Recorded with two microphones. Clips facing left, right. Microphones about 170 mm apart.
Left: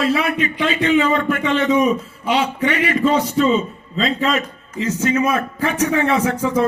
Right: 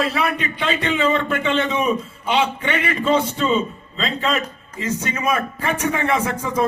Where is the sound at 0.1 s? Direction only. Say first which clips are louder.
Left 4 dB; 35° right (ahead or behind).